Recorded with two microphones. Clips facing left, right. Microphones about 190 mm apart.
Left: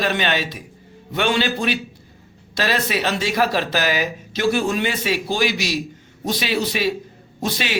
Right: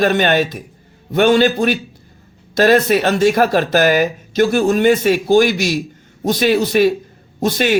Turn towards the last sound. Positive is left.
turn(degrees=-50)  # may be behind; listen again after turning